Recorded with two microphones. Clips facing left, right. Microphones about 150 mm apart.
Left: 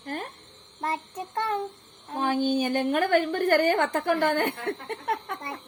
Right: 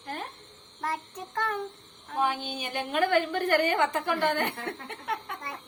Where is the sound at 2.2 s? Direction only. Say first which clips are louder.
Left 6 dB; 45° left (ahead or behind).